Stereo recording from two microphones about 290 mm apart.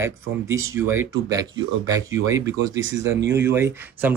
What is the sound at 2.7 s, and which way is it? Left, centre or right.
Speech, right.